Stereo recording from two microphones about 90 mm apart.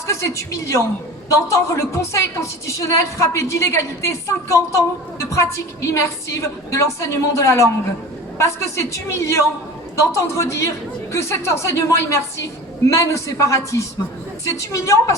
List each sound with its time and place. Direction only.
0.1 s a woman's voice: 35° left (ahead or behind)